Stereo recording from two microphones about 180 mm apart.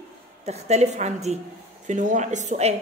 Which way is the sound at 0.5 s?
40° right (ahead or behind).